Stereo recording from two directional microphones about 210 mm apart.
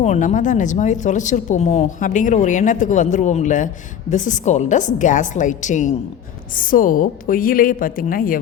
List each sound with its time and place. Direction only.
0.0 s speech: 30° left (ahead or behind)